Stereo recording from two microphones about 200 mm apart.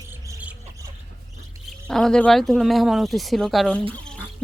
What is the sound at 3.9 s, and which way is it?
Bird, 5° left (ahead or behind).